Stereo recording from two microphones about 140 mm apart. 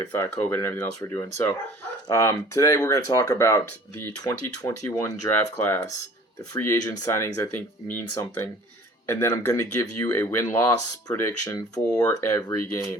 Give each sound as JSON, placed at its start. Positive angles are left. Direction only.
{"t": 0.0, "sound": "speech", "side_deg": 15}